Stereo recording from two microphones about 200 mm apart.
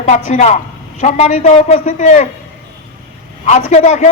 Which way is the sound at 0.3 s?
35° left (ahead or behind).